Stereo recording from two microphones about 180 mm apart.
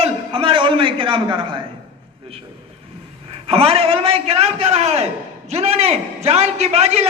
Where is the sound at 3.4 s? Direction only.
35° right (ahead or behind).